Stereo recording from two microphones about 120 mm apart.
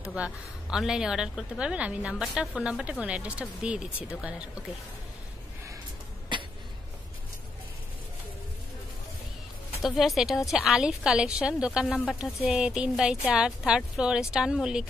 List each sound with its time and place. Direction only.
0.1 s a woman's voice: 5° right (ahead or behind)
6.3 s a sound: 40° right (ahead or behind)
9.8 s a woman's voice: centre (ahead or behind)